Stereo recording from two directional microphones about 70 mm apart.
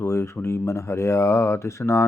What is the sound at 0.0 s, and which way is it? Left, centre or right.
Speech, left.